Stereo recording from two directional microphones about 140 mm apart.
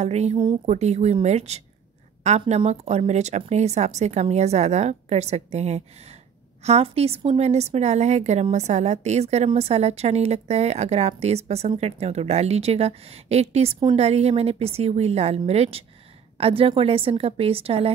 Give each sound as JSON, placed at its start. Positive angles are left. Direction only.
{"t": 0.0, "sound": "a woman's voice", "side_deg": -50}